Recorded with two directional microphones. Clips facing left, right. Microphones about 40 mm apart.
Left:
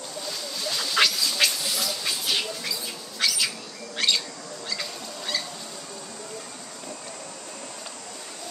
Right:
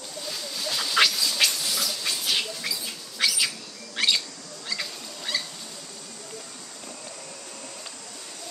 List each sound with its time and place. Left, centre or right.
0.3 s duck: centre
4.6 s fowl: centre